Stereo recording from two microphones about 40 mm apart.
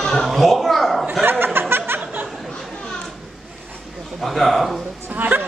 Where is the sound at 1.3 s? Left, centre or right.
Right.